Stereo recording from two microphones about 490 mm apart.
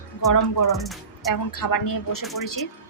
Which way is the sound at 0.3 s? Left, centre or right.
Left.